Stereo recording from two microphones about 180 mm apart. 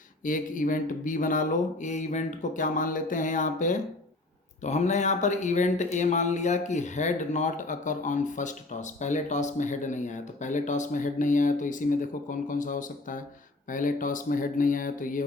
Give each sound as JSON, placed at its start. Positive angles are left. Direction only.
{"t": 0.3, "sound": "speech", "side_deg": 45}